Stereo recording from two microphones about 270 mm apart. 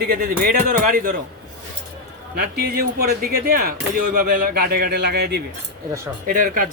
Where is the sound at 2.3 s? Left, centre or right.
Right.